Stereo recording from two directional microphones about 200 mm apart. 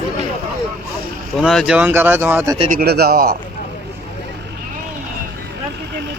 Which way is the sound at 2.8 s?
50° right (ahead or behind).